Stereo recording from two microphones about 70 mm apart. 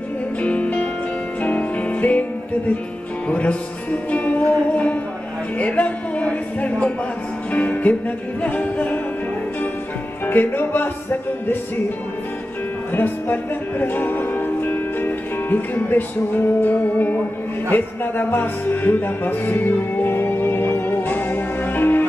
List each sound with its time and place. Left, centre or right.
0.4 s music: centre
3.3 s music: centre
10.2 s music: left
12.9 s music: left